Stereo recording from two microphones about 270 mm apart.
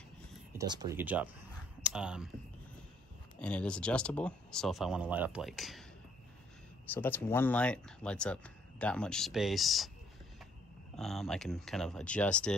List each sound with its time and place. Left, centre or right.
0.5 s speech: centre
3.3 s speech: centre
6.9 s speech: centre
11.0 s speech: centre